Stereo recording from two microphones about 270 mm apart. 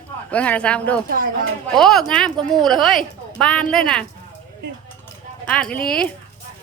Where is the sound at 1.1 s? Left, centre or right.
Right.